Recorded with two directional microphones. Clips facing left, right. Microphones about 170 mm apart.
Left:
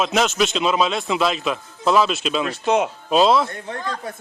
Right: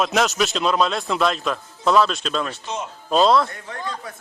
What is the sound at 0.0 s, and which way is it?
Speech, centre (ahead or behind).